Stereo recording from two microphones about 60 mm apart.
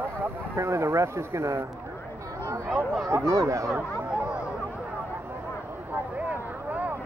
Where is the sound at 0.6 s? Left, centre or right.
Right.